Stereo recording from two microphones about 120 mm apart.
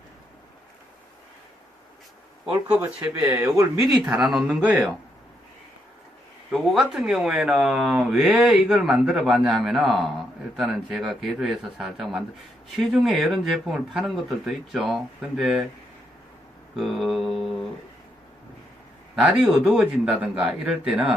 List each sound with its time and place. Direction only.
2.8 s speech: 15° right (ahead or behind)
3.8 s a man's voice: 10° right (ahead or behind)
6.5 s speech: centre (ahead or behind)
16.7 s speech: centre (ahead or behind)
19.1 s a man's voice: 5° right (ahead or behind)